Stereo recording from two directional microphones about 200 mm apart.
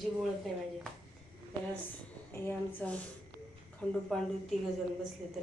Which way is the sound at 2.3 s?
10° left (ahead or behind).